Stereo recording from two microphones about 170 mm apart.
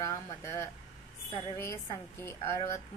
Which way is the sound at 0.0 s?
15° left (ahead or behind).